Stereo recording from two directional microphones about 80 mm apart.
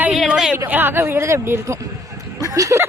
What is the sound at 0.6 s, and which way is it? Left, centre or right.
Speech, right.